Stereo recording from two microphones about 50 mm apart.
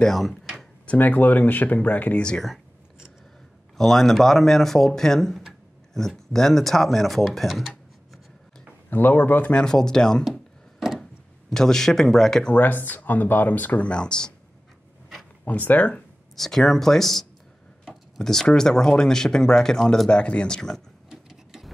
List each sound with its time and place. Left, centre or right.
0.0 s speech: centre
0.8 s speech: left
3.7 s speech: centre
8.9 s speech: left
9.5 s speech: centre
10.3 s chopping: centre
11.5 s speech: centre
12.5 s speech: left; by 14.3 s centre
15.4 s speech: left
16.3 s speech: centre
20.1 s speech: left
21.1 s printer: centre